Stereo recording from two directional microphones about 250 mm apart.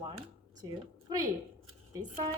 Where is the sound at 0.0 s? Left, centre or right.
Centre.